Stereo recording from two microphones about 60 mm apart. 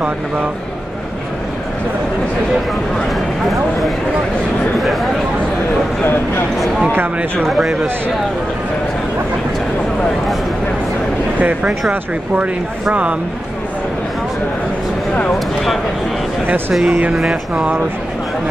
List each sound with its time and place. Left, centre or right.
7.5 s speech: centre
11.3 s speech: right
15.3 s speech: centre